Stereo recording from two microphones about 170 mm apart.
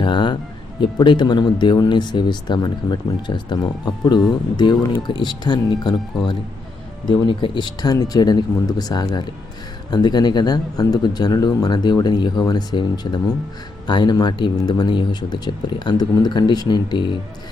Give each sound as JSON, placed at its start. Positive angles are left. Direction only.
{"t": 0.0, "sound": "music", "side_deg": 30}
{"t": 0.8, "sound": "speech", "side_deg": 30}